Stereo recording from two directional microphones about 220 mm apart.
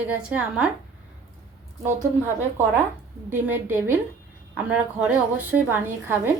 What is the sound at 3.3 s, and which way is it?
A woman's voice, 10° right (ahead or behind).